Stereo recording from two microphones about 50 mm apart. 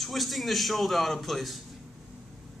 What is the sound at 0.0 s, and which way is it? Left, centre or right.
A man's voice, centre.